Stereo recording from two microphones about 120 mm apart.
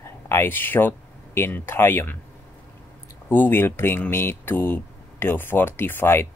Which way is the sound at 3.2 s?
15° left (ahead or behind).